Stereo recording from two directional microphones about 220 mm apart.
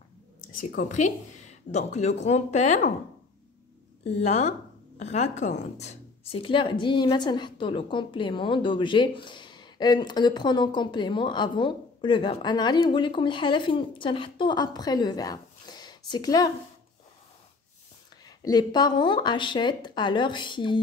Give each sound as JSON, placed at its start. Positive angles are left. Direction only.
{"t": 0.5, "sound": "speech", "side_deg": 35}
{"t": 4.0, "sound": "a woman's voice", "side_deg": 30}
{"t": 18.2, "sound": "a woman's voice", "side_deg": 15}